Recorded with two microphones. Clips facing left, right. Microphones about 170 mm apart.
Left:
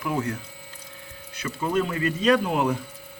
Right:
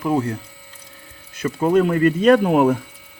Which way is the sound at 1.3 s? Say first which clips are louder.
Right 9 dB; 50° right (ahead or behind).